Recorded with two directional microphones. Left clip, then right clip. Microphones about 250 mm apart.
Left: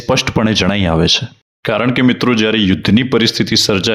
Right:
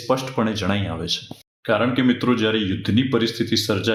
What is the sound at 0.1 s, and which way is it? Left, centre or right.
Speech, left.